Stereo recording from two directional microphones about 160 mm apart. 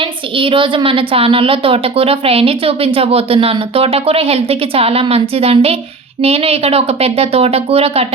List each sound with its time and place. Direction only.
0.0 s a woman's voice: 35° right (ahead or behind)